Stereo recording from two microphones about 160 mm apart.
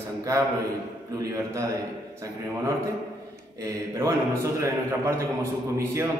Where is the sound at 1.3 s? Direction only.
20° right (ahead or behind).